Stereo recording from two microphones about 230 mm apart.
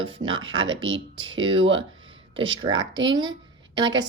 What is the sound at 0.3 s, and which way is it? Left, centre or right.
Speech, right.